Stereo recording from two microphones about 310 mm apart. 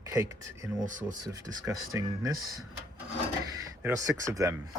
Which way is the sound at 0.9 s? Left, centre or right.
Right.